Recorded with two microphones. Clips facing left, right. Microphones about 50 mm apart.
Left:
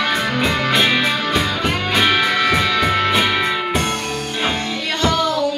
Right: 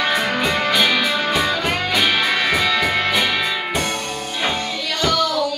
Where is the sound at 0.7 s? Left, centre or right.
Left.